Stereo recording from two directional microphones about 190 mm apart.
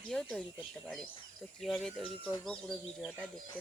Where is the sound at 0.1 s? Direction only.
5° left (ahead or behind).